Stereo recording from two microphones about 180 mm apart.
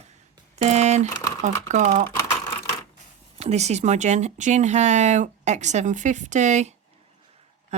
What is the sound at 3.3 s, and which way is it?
Speech, 35° right (ahead or behind).